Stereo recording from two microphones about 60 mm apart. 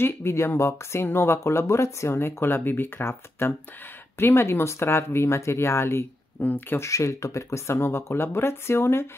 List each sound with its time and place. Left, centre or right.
0.0 s speech: left
6.4 s speech: left
6.8 s speech: left